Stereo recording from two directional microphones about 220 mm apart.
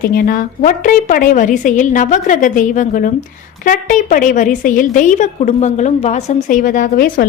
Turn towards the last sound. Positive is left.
turn(degrees=40)  # may be behind; listen again after turning